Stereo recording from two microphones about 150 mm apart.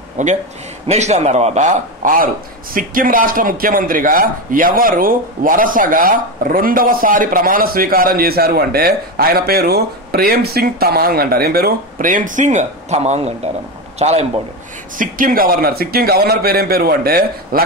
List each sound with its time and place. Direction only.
0.2 s a man's voice: 55° right (ahead or behind)
15.0 s a man's voice: 65° right (ahead or behind); by 17.6 s 85° right